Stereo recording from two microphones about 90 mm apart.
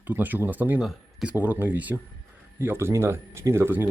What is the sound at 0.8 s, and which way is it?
Speech, 10° right (ahead or behind).